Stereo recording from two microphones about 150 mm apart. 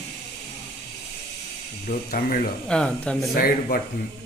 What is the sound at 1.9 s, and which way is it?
Speech, 60° left (ahead or behind).